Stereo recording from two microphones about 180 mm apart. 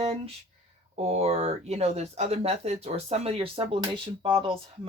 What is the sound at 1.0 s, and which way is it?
Speech, 35° right (ahead or behind).